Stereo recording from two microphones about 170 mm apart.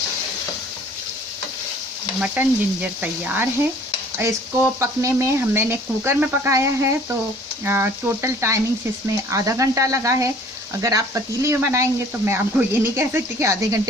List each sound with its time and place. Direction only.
2.2 s speech: 10° right (ahead or behind)